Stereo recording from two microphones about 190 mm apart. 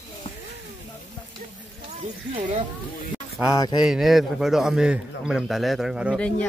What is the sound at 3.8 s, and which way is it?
A man's voice, centre (ahead or behind).